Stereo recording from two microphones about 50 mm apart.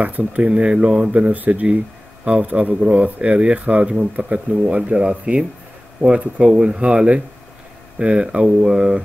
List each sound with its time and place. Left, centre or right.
0.0 s speech: right; by 9.0 s centre